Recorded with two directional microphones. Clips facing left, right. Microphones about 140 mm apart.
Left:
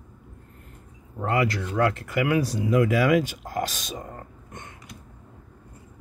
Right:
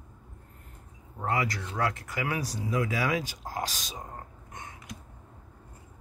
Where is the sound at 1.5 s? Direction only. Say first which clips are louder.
Left 7 dB; 65° left (ahead or behind).